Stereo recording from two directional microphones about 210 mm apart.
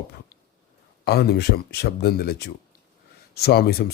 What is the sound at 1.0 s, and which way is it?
Speech, 50° left (ahead or behind).